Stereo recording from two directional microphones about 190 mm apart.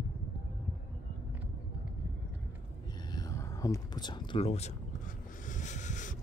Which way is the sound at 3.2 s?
20° left (ahead or behind).